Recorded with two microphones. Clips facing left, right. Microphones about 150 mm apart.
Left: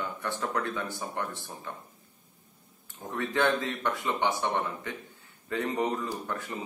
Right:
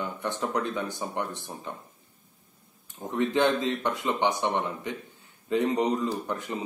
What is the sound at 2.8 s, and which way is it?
A man's voice, 15° right (ahead or behind).